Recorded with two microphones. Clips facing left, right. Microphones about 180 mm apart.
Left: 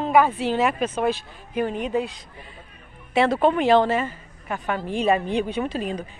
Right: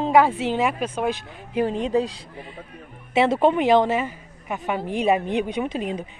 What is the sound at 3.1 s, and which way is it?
A woman's voice, 25° right (ahead or behind).